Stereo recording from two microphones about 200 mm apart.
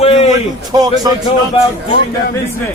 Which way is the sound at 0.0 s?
30° left (ahead or behind).